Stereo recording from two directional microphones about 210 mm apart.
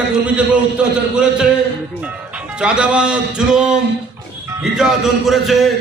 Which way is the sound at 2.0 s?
5° right (ahead or behind).